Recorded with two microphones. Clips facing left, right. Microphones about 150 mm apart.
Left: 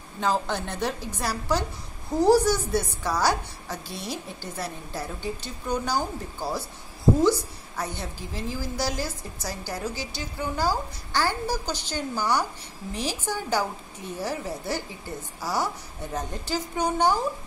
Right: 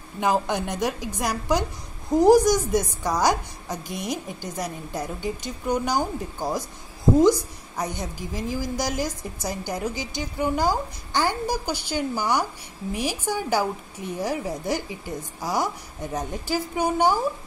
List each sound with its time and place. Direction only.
0.2 s a woman's voice: 15° right (ahead or behind)